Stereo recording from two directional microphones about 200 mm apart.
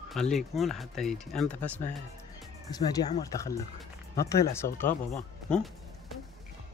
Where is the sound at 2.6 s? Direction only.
20° left (ahead or behind).